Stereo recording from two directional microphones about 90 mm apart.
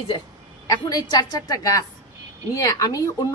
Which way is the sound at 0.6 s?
45° left (ahead or behind).